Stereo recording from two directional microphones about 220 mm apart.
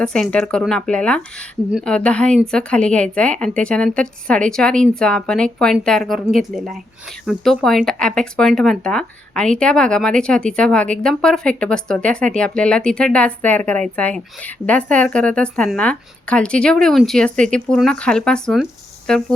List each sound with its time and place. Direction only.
0.0 s speech: 5° left (ahead or behind)